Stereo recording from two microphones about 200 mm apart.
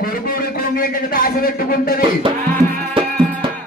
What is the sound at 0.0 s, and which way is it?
A man's voice, 45° left (ahead or behind).